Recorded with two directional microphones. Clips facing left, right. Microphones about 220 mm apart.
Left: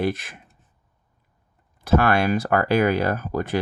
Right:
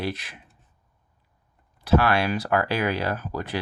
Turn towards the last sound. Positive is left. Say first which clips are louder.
# left 5 dB
turn(degrees=50)  # may be behind; listen again after turning